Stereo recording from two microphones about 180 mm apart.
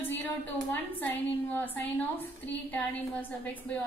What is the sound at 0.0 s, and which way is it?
A woman's voice, 10° left (ahead or behind).